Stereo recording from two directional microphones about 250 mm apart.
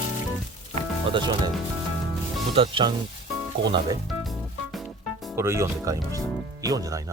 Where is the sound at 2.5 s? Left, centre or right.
Centre.